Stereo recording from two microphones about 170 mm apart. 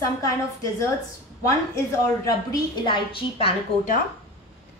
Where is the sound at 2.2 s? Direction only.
25° left (ahead or behind).